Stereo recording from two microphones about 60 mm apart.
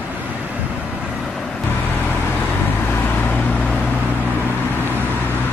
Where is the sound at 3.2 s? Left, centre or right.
Left.